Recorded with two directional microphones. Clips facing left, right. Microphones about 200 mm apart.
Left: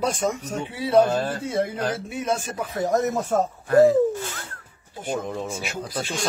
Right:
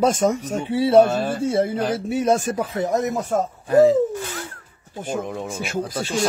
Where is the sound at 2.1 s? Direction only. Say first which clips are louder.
Right 7 dB; 45° right (ahead or behind).